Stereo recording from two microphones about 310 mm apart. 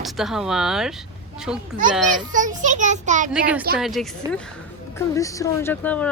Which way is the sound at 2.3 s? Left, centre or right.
Right.